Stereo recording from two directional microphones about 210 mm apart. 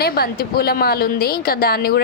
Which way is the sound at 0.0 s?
45° left (ahead or behind).